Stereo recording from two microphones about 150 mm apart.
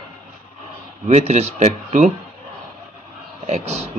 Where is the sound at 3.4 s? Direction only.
45° right (ahead or behind).